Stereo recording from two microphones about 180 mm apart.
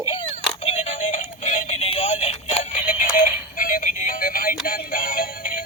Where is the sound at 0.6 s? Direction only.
35° left (ahead or behind).